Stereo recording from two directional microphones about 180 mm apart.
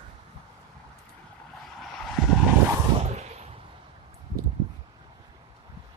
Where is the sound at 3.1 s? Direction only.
35° right (ahead or behind).